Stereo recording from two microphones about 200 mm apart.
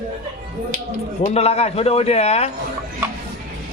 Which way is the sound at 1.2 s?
30° left (ahead or behind).